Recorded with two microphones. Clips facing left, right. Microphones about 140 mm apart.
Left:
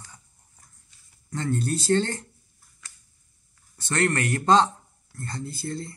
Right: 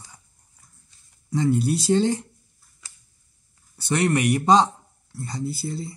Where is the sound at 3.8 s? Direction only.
10° right (ahead or behind).